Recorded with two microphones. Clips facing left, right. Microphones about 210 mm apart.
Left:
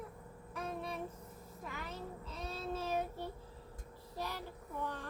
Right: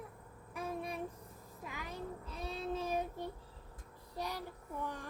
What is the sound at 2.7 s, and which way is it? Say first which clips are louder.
Speech: even; 15° right (ahead or behind).